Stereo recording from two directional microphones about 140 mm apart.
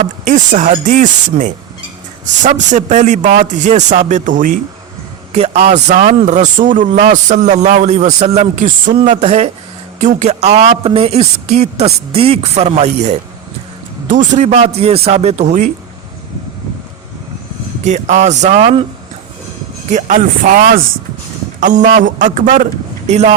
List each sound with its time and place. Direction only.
0.3 s a man's voice: 65° right (ahead or behind)
5.3 s a man's voice: 50° right (ahead or behind)
9.2 s speech: 50° right (ahead or behind)
17.8 s a man's voice: 60° right (ahead or behind)
19.9 s a man's voice: 60° right (ahead or behind)
20.2 s a man's voice: 75° right (ahead or behind)
21.6 s a man's voice: 65° right (ahead or behind)
23.0 s speech: 55° right (ahead or behind)